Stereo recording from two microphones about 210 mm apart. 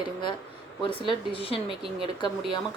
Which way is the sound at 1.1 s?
25° left (ahead or behind).